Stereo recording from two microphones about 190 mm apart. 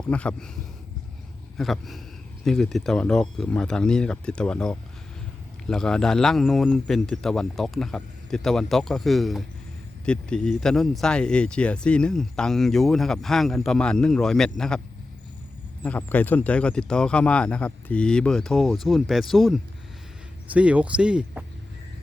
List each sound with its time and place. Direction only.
0.0 s speech: 5° left (ahead or behind)
1.5 s speech: centre (ahead or behind)
15.8 s speech: 10° left (ahead or behind)